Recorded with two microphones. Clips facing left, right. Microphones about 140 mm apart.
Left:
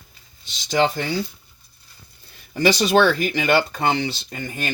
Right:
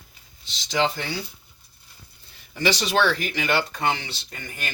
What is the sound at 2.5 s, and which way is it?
Speech, 45° left (ahead or behind).